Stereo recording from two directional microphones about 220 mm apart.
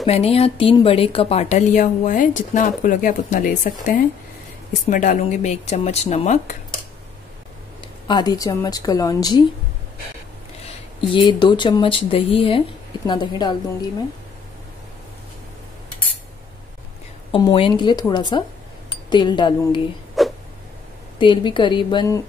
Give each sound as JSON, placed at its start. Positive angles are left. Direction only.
{"t": 0.0, "sound": "speech", "side_deg": 30}
{"t": 8.1, "sound": "a woman's voice", "side_deg": 20}
{"t": 10.6, "sound": "speech", "side_deg": 20}
{"t": 17.3, "sound": "speech", "side_deg": 20}
{"t": 20.2, "sound": "a sound", "side_deg": 0}
{"t": 21.2, "sound": "speech", "side_deg": 20}